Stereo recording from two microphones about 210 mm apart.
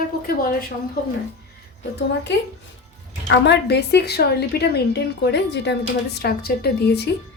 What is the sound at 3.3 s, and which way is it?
A woman's voice, 55° left (ahead or behind).